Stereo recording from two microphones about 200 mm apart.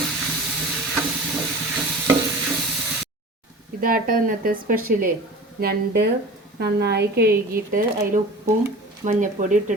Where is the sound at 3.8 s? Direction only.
45° right (ahead or behind).